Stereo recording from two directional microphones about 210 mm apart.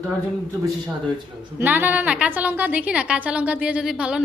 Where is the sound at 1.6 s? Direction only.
10° right (ahead or behind).